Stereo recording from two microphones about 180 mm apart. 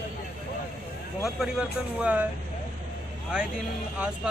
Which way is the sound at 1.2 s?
5° right (ahead or behind).